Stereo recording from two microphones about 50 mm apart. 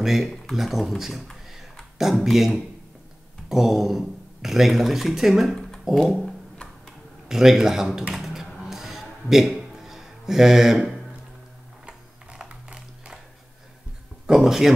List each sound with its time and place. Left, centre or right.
0.0 s a man's voice: centre
5.5 s a sound: centre
6.0 s a man's voice: centre
8.1 s typing: centre
8.6 s music: centre
11.8 s a sound: right
14.2 s speech: centre